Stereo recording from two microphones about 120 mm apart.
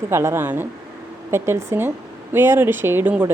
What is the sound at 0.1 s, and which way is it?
A woman's voice, 20° right (ahead or behind).